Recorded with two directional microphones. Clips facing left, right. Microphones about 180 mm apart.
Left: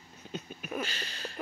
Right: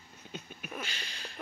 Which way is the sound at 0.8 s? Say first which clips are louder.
Left 5 dB; 40° left (ahead or behind).